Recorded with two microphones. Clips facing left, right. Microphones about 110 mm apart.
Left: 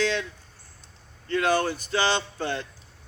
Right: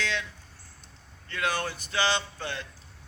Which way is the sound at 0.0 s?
35° left (ahead or behind).